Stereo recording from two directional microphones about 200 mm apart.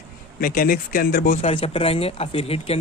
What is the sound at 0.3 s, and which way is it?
Speech, 45° left (ahead or behind).